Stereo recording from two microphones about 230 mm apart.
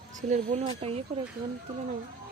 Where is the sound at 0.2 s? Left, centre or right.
Right.